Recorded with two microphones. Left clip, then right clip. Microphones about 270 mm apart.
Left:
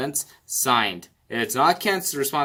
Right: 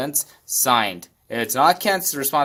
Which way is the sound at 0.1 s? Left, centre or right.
Centre.